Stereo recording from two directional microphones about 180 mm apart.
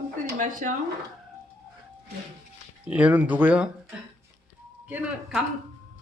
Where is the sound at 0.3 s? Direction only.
45° right (ahead or behind).